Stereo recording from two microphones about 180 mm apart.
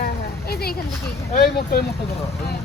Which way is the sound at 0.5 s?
60° left (ahead or behind).